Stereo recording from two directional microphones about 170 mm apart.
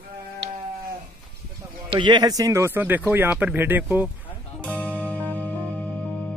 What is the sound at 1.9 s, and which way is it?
Speech, 25° right (ahead or behind).